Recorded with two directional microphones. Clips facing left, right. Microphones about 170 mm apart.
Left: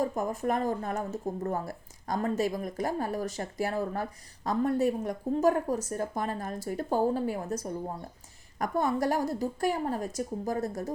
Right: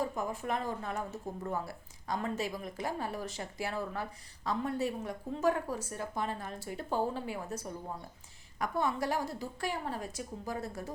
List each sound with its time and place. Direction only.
0.0 s a woman's voice: 45° left (ahead or behind)